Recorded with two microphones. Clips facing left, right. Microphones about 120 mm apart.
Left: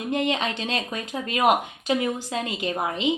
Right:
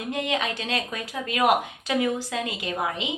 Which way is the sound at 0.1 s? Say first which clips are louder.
Left 2 dB; 25° left (ahead or behind).